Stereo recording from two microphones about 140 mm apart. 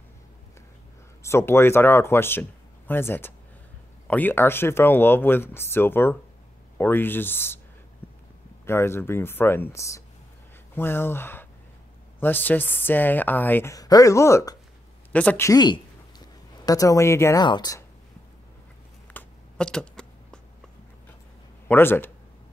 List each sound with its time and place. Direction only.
1.2 s speech: 20° left (ahead or behind)
8.0 s a sound: 15° left (ahead or behind)
8.6 s speech: 15° left (ahead or behind)
15.5 s speech: 30° left (ahead or behind)
19.1 s a sound: 5° left (ahead or behind)
21.6 s speech: 15° left (ahead or behind)